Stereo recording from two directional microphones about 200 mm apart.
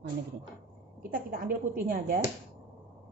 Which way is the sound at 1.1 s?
45° right (ahead or behind).